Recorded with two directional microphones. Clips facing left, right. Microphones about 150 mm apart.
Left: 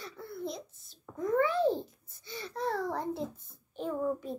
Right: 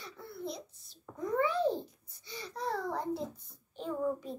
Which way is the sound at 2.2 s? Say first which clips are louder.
Left 3 dB; centre (ahead or behind).